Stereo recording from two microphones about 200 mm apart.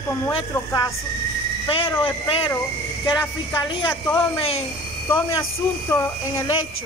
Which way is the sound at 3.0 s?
20° left (ahead or behind).